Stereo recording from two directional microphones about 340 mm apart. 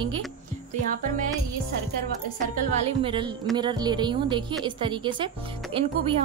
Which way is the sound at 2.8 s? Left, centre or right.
Centre.